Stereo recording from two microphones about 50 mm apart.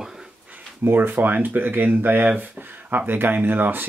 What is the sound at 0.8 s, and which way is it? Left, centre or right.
Speech, right.